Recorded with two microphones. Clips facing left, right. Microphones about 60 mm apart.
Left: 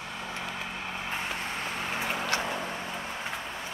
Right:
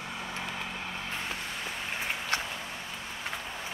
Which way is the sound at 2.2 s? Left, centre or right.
Left.